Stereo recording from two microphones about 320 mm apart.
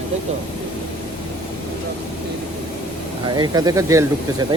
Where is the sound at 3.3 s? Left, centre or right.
Centre.